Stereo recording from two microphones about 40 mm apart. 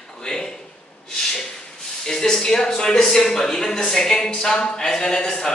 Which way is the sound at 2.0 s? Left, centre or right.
Centre.